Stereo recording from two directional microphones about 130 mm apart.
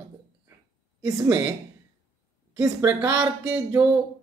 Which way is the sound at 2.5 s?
25° right (ahead or behind).